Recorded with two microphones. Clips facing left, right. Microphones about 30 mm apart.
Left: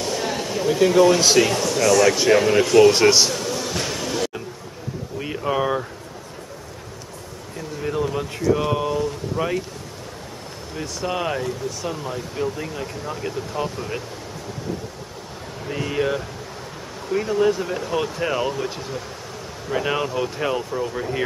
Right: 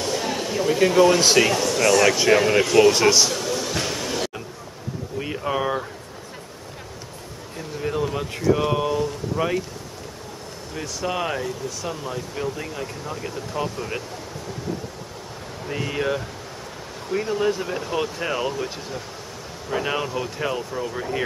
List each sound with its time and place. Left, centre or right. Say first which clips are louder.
0.0 s a sound: even; centre
0.7 s speech: left 1 dB; centre
2.9 s a man's voice: left 2 dB; centre
3.3 s music: even; centre
5.2 s a sound: left 2 dB; centre
7.5 s speech: left 1 dB; centre
10.8 s speech: left 1 dB; centre
15.7 s speech: left 2 dB; centre
19.7 s speech: left 2 dB; centre